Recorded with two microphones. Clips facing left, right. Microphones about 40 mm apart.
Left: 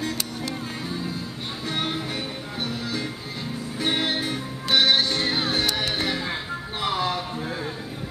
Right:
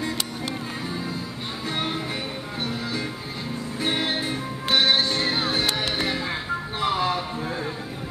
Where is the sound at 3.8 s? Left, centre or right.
Left.